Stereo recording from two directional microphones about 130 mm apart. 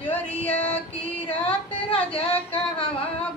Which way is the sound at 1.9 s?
50° left (ahead or behind).